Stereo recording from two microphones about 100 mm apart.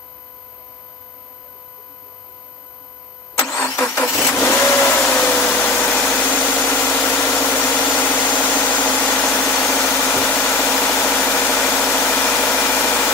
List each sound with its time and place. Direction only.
3.5 s vehicle: 30° left (ahead or behind)
4.0 s vehicle: 15° left (ahead or behind)
4.7 s engine: 15° left (ahead or behind)